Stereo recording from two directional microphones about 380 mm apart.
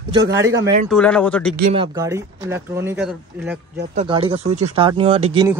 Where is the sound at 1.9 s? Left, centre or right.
Centre.